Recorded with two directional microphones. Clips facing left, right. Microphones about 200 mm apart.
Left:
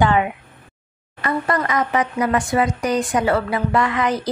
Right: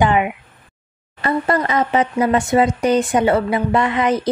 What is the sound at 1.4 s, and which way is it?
Speech, 25° right (ahead or behind).